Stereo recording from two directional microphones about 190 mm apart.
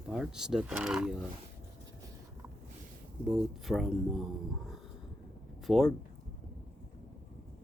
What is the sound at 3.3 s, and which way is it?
Speech, centre (ahead or behind).